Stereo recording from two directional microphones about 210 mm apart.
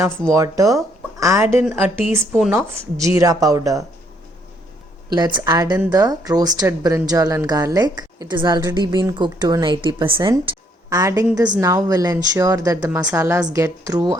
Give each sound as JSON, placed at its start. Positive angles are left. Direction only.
{"t": 0.3, "sound": "speech", "side_deg": -15}
{"t": 5.1, "sound": "a woman's voice", "side_deg": -20}